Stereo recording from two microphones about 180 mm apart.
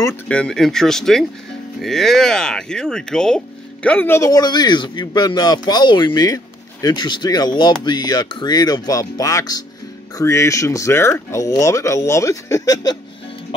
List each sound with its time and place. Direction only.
0.3 s speech: 5° left (ahead or behind)